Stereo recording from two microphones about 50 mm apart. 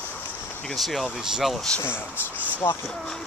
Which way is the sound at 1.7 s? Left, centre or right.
Centre.